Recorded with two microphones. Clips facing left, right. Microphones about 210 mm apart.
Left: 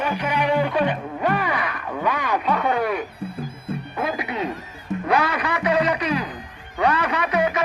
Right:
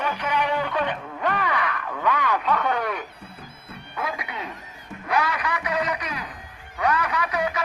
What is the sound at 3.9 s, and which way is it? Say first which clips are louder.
Speech: left 4 dB; 30° left (ahead or behind).